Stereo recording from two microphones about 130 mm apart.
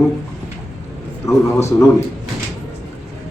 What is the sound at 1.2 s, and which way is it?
Speech, 20° left (ahead or behind).